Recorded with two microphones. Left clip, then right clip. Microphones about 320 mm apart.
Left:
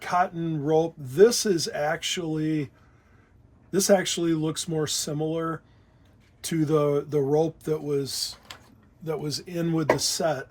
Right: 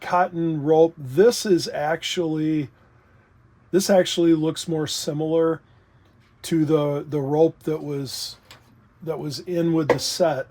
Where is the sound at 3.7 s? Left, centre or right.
Right.